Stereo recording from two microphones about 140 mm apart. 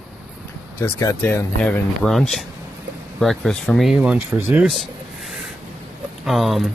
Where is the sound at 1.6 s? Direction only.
5° left (ahead or behind); by 4.7 s 15° right (ahead or behind).